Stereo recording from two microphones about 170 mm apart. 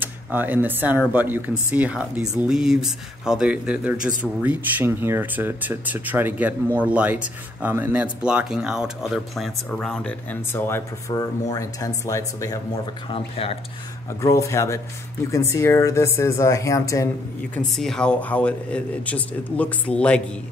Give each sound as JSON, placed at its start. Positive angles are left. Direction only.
{"t": 0.0, "sound": "speech", "side_deg": -10}
{"t": 13.1, "sound": "speech", "side_deg": 35}
{"t": 14.2, "sound": "speech", "side_deg": 20}
{"t": 17.6, "sound": "speech", "side_deg": 5}